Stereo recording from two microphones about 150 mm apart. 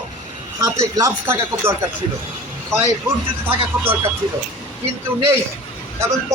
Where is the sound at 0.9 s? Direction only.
20° right (ahead or behind).